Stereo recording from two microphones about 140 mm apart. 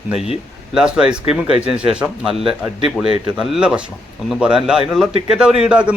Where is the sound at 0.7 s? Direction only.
5° right (ahead or behind).